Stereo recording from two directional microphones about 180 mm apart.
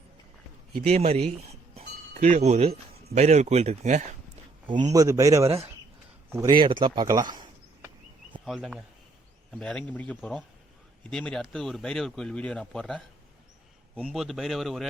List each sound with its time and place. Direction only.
0.9 s speech: 35° right (ahead or behind)
4.6 s speech: 25° right (ahead or behind)
8.4 s speech: centre (ahead or behind)